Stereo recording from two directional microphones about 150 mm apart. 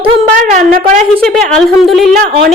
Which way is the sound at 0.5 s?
55° right (ahead or behind).